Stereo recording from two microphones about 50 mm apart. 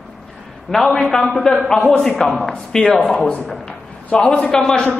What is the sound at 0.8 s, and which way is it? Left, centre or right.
A man's voice, centre.